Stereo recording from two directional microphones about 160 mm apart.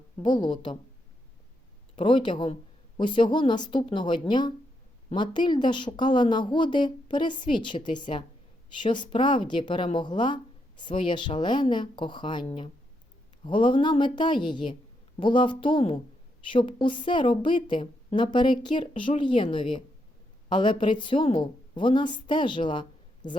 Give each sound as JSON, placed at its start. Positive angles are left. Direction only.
{"t": 0.2, "sound": "a woman's voice", "side_deg": 30}
{"t": 2.0, "sound": "a woman's voice", "side_deg": 30}